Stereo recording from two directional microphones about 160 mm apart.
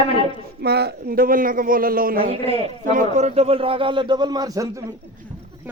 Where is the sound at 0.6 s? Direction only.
90° right; by 2.2 s 65° right (ahead or behind).